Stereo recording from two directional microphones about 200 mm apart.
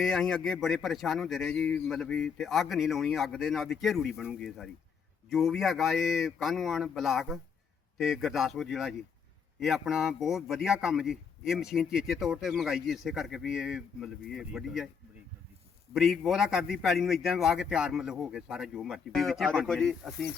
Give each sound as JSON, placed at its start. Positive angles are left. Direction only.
{"t": 0.0, "sound": "a man's voice", "side_deg": 0}
{"t": 16.0, "sound": "a man's voice", "side_deg": 0}